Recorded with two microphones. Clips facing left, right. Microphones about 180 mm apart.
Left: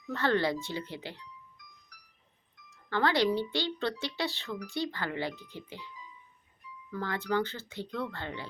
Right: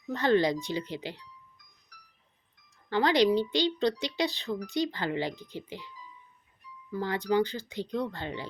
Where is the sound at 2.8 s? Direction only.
15° right (ahead or behind).